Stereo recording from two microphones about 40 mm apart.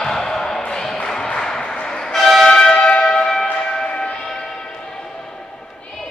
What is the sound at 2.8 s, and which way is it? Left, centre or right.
Church bell, left.